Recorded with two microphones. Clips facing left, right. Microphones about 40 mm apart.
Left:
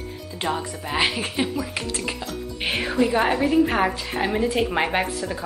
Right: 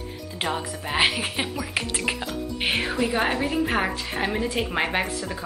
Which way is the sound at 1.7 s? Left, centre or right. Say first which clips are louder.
Right 1 dB; right.